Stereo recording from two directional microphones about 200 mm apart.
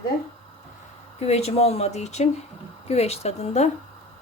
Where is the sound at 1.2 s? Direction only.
30° left (ahead or behind).